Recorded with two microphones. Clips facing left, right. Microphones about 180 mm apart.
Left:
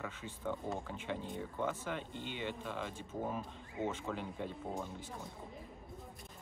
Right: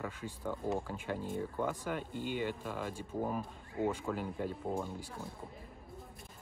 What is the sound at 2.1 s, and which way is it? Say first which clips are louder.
Speech: right 7 dB; 45° right (ahead or behind).